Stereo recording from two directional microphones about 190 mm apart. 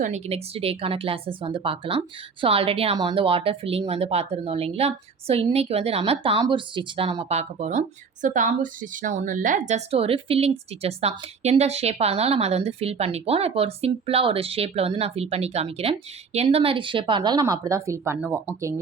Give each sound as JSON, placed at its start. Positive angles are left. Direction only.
{"t": 0.0, "sound": "a woman's voice", "side_deg": -35}